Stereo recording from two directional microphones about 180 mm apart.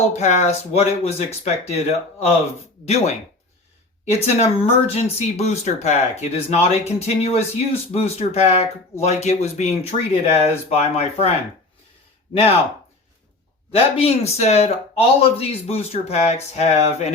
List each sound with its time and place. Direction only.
0.1 s speech: 40° left (ahead or behind)
4.4 s speech: 35° left (ahead or behind)
13.7 s speech: 35° left (ahead or behind)